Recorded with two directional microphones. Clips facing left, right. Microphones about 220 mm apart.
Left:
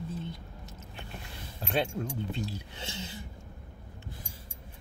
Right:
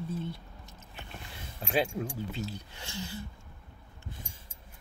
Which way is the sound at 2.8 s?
20° left (ahead or behind).